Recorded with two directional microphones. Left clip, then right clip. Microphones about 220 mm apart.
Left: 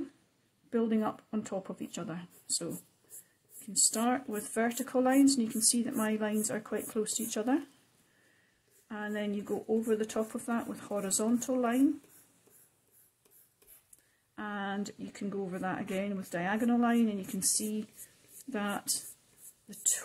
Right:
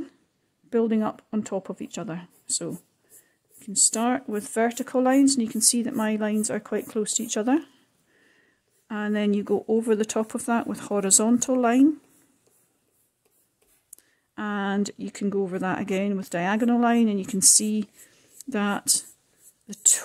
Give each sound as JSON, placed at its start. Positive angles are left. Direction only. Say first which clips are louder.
{"t": 0.7, "sound": "speech", "louder": "right 8 dB", "side_deg": -40}
{"t": 8.8, "sound": "speech", "louder": "right 10 dB", "side_deg": -45}
{"t": 14.3, "sound": "speech", "louder": "right 9 dB", "side_deg": -45}